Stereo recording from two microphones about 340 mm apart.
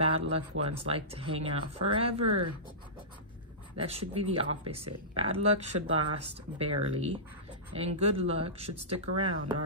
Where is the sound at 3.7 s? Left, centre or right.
Centre.